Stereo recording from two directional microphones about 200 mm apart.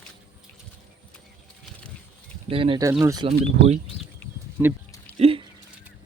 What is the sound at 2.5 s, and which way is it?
Speech, 25° right (ahead or behind).